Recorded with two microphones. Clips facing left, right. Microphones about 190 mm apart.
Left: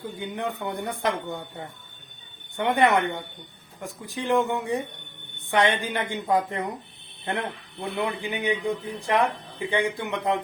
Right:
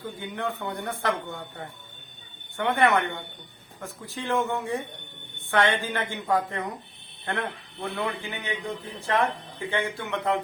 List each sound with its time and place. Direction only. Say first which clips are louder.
0.2 s a woman's voice: left 2 dB; 15° left (ahead or behind)